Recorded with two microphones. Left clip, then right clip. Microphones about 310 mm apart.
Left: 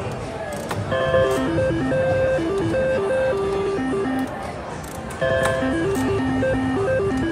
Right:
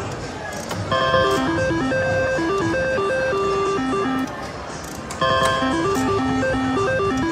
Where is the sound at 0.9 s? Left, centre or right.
Centre.